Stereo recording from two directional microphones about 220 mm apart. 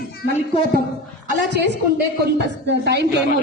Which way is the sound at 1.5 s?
50° right (ahead or behind).